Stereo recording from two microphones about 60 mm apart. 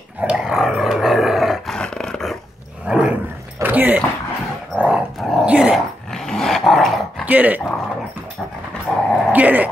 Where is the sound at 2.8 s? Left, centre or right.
Centre.